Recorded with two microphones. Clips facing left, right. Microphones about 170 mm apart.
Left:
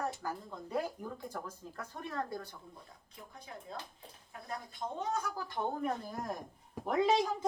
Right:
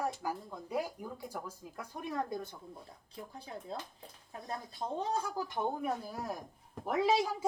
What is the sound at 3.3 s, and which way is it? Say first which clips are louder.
Speech: right 2 dB; 30° right (ahead or behind).